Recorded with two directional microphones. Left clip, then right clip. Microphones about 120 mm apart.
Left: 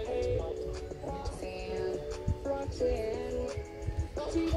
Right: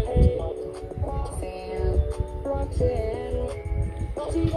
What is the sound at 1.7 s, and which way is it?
Music, 30° right (ahead or behind).